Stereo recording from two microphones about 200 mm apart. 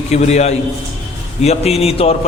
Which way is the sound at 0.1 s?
35° left (ahead or behind).